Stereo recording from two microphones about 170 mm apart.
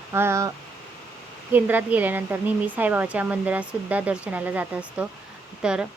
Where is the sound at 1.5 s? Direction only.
10° right (ahead or behind).